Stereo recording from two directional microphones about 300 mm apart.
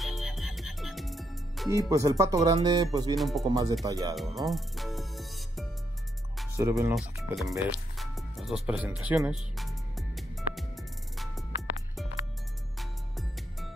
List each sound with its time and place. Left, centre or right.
0.0 s music: centre
1.9 s speech: centre
3.2 s speech: centre
3.4 s speech: centre
4.4 s music: centre
6.3 s speech: centre
7.4 s music: centre
12.7 s music: centre